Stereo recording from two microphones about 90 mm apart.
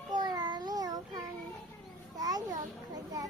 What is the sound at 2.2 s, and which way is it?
Children playing, 45° right (ahead or behind).